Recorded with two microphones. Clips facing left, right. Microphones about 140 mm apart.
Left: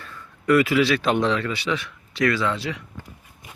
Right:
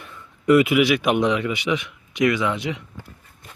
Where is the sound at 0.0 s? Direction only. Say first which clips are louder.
Right 4 dB; 20° right (ahead or behind).